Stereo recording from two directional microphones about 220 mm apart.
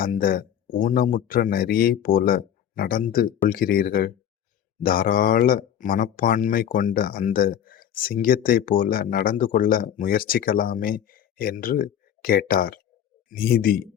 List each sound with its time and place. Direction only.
0.0 s speech: 40° left (ahead or behind)